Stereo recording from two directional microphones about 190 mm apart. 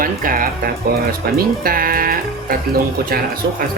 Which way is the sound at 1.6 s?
50° right (ahead or behind).